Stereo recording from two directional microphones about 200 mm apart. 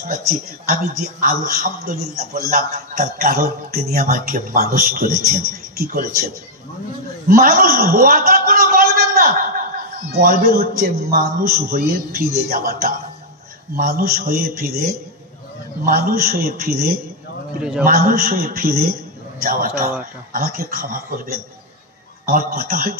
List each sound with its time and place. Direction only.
1.2 s a man's voice: 45° right (ahead or behind)
7.2 s a man's voice: 45° right (ahead or behind)
17.6 s a man's voice: 5° right (ahead or behind)
17.8 s a man's voice: 45° right (ahead or behind)